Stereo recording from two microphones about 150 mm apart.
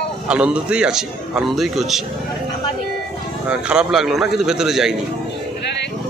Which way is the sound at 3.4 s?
10° right (ahead or behind).